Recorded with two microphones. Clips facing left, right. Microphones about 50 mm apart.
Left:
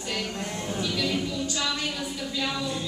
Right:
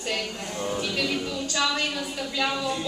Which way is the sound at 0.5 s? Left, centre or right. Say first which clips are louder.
Right 7 dB; right.